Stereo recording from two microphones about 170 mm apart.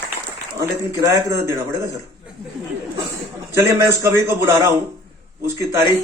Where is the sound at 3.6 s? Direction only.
15° right (ahead or behind).